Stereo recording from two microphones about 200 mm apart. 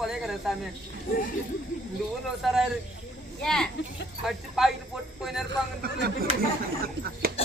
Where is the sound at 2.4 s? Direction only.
Centre (ahead or behind).